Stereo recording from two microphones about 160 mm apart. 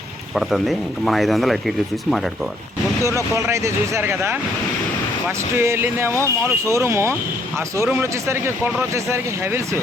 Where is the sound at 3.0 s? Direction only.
20° right (ahead or behind).